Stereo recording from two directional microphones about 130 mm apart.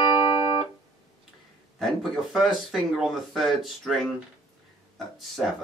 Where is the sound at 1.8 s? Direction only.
Centre (ahead or behind).